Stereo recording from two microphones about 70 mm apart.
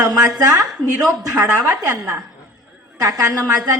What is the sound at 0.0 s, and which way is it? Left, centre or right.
A woman's voice, right.